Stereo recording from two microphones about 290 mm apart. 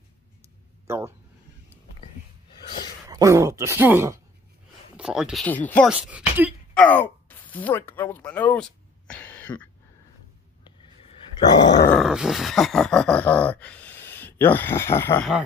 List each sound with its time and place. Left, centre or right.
0.8 s speech: centre
3.1 s speech: centre
6.7 s gasp: centre
11.3 s grunt: centre
11.9 s groan: centre